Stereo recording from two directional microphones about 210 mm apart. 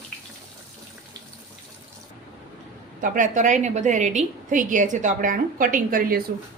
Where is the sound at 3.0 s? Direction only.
40° right (ahead or behind).